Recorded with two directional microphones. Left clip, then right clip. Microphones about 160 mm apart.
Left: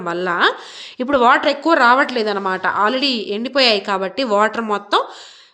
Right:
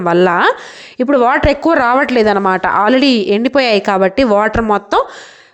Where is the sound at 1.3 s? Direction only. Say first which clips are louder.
Right 2 dB; 45° right (ahead or behind).